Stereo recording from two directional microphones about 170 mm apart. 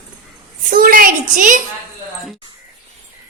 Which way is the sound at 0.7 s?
55° right (ahead or behind).